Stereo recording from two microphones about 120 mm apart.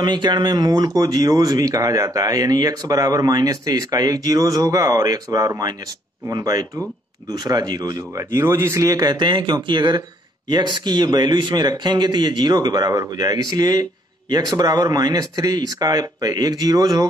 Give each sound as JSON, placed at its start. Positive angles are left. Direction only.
{"t": 0.0, "sound": "speech", "side_deg": -40}
{"t": 8.4, "sound": "speech", "side_deg": -20}